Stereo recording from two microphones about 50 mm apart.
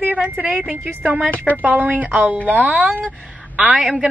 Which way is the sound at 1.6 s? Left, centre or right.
Right.